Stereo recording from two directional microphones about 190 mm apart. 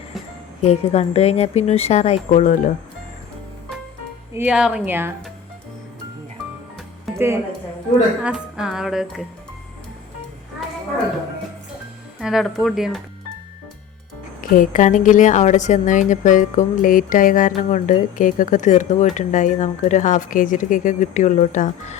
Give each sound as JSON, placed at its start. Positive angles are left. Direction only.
{"t": 0.6, "sound": "a woman's voice", "side_deg": 35}
{"t": 4.4, "sound": "speech", "side_deg": -5}
{"t": 7.1, "sound": "music", "side_deg": 0}
{"t": 12.2, "sound": "music", "side_deg": 0}
{"t": 14.5, "sound": "a woman's voice", "side_deg": 45}